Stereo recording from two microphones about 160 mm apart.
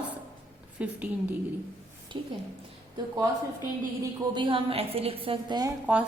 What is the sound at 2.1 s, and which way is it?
Speech, 30° right (ahead or behind).